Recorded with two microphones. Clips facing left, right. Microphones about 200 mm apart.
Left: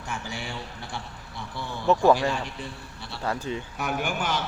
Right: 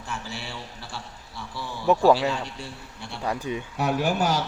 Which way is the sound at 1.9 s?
15° right (ahead or behind).